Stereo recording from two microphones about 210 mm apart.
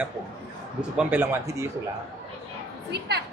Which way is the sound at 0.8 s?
5° right (ahead or behind).